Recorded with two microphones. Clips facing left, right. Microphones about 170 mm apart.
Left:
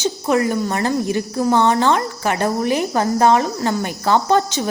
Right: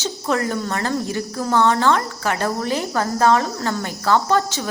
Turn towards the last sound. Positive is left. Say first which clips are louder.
# left 3 dB
turn(degrees=20)  # may be behind; listen again after turning